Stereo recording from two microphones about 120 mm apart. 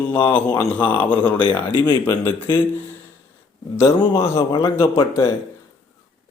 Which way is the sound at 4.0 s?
45° left (ahead or behind).